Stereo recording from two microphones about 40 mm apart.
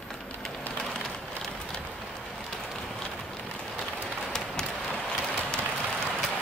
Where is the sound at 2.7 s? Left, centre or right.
Centre.